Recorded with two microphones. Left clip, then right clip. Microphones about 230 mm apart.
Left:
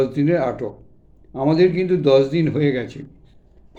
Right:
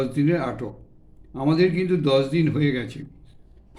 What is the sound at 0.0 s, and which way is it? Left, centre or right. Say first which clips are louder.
A man's voice: left 5 dB; centre.